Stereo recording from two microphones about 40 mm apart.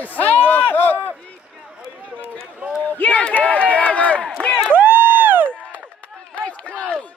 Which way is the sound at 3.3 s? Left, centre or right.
Left.